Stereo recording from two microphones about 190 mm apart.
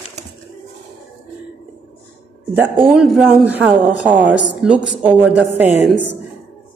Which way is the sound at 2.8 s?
5° right (ahead or behind).